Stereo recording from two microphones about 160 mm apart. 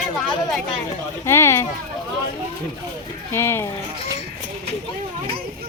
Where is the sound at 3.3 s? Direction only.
15° left (ahead or behind).